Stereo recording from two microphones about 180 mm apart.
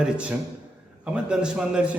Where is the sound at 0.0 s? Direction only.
5° right (ahead or behind).